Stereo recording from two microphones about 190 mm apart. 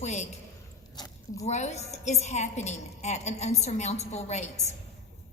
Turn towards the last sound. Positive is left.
turn(degrees=35)  # may be behind; listen again after turning